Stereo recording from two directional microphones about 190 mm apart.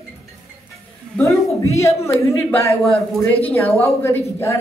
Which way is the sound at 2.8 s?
Centre (ahead or behind).